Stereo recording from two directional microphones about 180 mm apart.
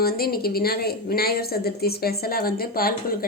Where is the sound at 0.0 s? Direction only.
55° left (ahead or behind).